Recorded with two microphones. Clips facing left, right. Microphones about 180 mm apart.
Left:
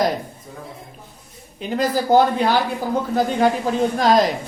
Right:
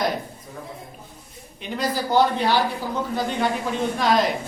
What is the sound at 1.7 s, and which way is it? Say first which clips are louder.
Speech: left 5 dB; 50° left (ahead or behind).